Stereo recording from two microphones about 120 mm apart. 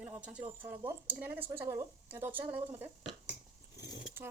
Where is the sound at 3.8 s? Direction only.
35° left (ahead or behind).